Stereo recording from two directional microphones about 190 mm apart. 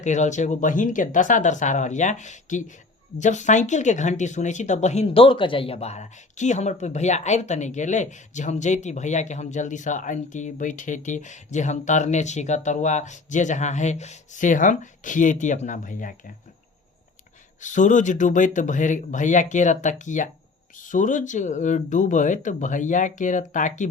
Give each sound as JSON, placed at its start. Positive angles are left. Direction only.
{"t": 0.0, "sound": "speech", "side_deg": 40}
{"t": 17.6, "sound": "speech", "side_deg": 40}